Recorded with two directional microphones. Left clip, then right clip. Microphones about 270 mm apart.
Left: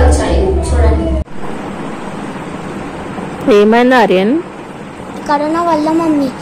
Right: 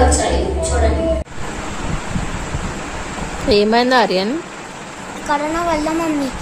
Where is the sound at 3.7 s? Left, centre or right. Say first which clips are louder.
Left 5 dB; centre.